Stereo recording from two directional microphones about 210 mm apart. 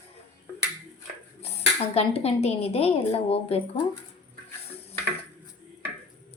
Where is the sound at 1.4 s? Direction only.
30° left (ahead or behind).